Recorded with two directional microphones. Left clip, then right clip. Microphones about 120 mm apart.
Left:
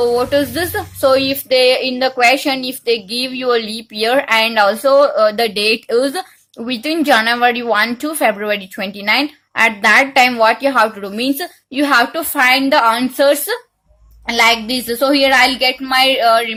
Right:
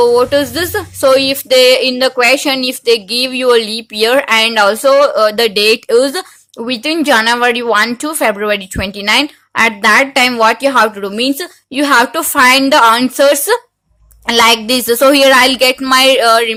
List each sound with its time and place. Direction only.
0.0 s speech: 30° right (ahead or behind)
14.3 s a woman's voice: 55° right (ahead or behind)